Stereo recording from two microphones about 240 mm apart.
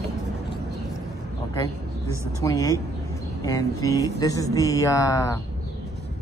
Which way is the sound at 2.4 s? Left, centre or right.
Centre.